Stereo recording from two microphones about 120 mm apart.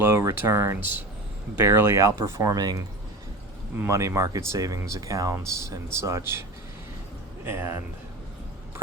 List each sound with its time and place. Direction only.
0.0 s speech: 20° right (ahead or behind)
7.4 s speech: 20° right (ahead or behind)